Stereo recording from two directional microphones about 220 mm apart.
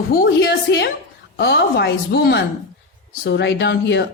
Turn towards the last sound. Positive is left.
turn(degrees=50)  # may be behind; listen again after turning